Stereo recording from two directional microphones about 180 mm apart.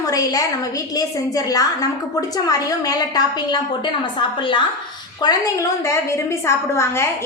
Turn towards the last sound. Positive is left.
turn(degrees=15)  # may be behind; listen again after turning